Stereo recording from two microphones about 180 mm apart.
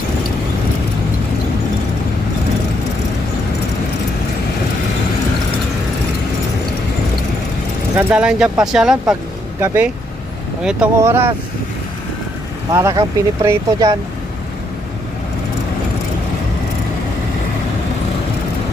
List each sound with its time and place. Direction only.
7.9 s speech: 5° right (ahead or behind)
12.7 s speech: 20° right (ahead or behind)